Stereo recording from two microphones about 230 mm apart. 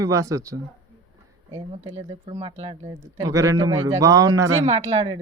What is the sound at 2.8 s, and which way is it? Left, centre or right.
Speech, centre.